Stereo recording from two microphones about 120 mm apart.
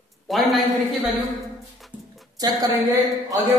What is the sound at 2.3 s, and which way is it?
Speech, 35° right (ahead or behind).